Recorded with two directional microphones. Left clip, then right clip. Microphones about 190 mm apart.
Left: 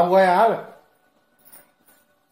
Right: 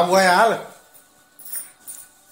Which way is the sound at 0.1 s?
5° right (ahead or behind).